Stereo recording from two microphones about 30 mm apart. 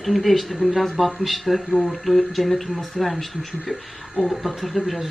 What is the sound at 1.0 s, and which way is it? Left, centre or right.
Speech, centre.